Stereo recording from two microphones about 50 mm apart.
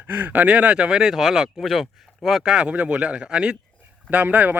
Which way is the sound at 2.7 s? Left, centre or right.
Right.